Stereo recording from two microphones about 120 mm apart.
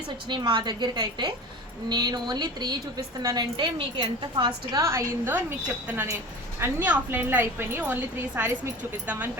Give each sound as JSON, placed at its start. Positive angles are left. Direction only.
{"t": 0.3, "sound": "a woman's voice", "side_deg": -40}
{"t": 4.8, "sound": "a woman's voice", "side_deg": -25}